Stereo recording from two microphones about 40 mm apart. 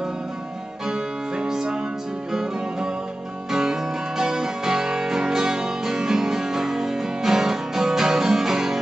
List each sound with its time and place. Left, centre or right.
0.8 s music: centre
3.5 s music: centre